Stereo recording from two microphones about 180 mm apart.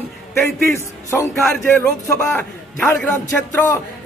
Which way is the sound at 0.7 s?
15° left (ahead or behind).